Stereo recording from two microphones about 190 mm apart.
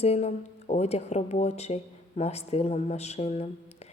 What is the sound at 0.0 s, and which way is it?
Speech, 35° left (ahead or behind).